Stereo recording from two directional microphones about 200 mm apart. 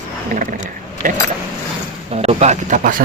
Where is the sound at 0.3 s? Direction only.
40° right (ahead or behind).